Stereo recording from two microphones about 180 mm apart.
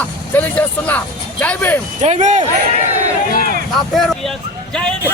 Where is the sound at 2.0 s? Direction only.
40° right (ahead or behind).